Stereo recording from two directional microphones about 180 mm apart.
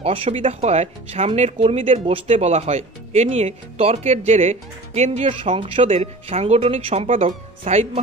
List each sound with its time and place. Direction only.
0.0 s speech: 35° right (ahead or behind)